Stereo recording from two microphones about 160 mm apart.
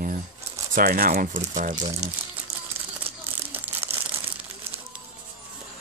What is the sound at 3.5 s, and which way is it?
Crumpling, 10° right (ahead or behind).